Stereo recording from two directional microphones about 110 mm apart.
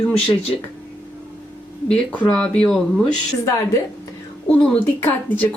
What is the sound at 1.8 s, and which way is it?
Speech, 10° left (ahead or behind).